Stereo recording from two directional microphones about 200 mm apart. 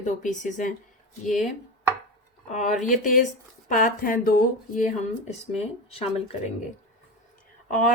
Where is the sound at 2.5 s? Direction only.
35° left (ahead or behind).